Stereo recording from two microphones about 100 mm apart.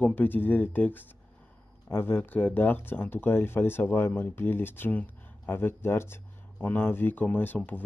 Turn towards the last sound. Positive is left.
turn(degrees=20)  # may be behind; listen again after turning